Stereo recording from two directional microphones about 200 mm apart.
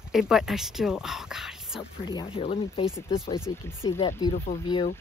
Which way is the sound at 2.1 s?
25° left (ahead or behind).